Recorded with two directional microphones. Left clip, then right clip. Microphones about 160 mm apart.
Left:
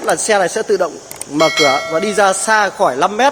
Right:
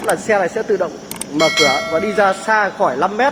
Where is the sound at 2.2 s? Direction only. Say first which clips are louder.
Left 2 dB; 35° left (ahead or behind).